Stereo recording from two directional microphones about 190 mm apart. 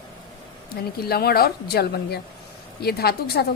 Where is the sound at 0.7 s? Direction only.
55° left (ahead or behind).